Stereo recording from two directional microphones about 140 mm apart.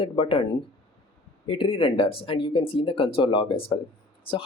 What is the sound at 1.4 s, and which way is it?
Speech, 40° left (ahead or behind).